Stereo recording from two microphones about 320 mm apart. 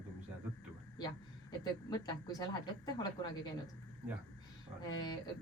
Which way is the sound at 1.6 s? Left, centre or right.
Centre.